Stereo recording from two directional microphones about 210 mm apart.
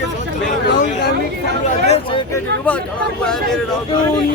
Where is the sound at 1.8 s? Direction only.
30° left (ahead or behind).